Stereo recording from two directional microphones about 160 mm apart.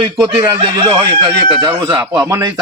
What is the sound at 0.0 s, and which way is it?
Speech, 30° right (ahead or behind).